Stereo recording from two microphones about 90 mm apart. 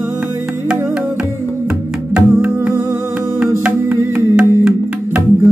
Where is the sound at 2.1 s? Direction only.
15° right (ahead or behind).